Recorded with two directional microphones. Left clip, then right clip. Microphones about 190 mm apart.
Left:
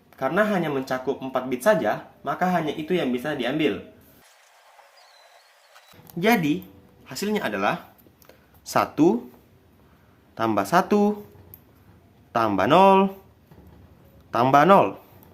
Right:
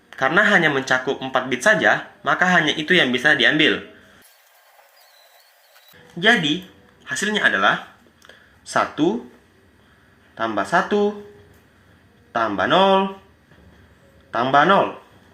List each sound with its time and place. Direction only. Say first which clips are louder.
0.1 s speech: right 7 dB; 5° right (ahead or behind)
7.0 s speech: right 8 dB; 15° left (ahead or behind)
8.7 s speech: right 1 dB; 25° left (ahead or behind)
10.3 s speech: right 1 dB; 30° left (ahead or behind)
12.3 s speech: right 1 dB; 25° left (ahead or behind)
14.3 s speech: right 1 dB; 30° left (ahead or behind)